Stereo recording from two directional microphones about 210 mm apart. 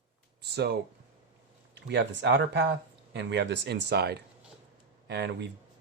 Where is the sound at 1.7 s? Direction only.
55° right (ahead or behind).